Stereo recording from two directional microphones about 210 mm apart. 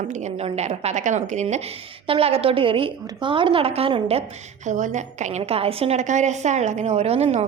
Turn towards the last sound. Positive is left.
turn(degrees=-30)  # may be behind; listen again after turning